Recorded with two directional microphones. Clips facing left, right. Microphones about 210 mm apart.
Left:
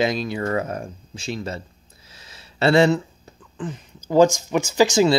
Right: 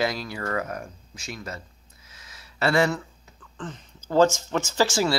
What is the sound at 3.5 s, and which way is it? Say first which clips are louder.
Speech: left 6 dB; 10° left (ahead or behind).